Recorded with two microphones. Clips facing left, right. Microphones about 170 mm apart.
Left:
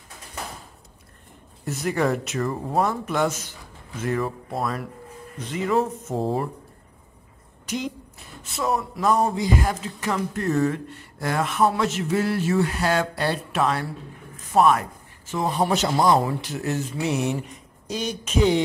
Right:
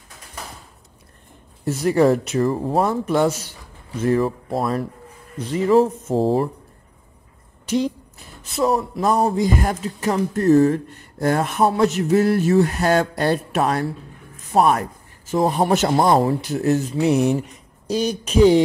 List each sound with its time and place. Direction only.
1.6 s a man's voice: 30° right (ahead or behind)
7.6 s a woman's voice: 30° right (ahead or behind); by 16.2 s 50° right (ahead or behind)
16.3 s a man's voice: 40° right (ahead or behind)